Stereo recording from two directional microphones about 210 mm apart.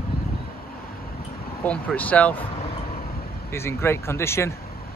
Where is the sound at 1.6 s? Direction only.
5° left (ahead or behind).